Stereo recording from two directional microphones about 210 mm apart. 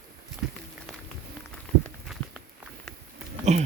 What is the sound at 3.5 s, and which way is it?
Speech, 35° right (ahead or behind).